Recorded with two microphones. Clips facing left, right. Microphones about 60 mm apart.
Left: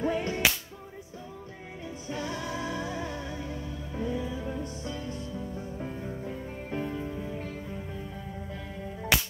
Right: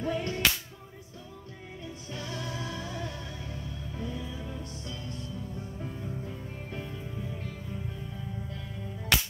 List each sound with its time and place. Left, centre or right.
0.0 s music: left
2.0 s music: left